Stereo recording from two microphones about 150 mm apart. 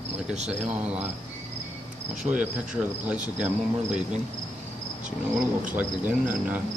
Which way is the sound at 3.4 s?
5° right (ahead or behind).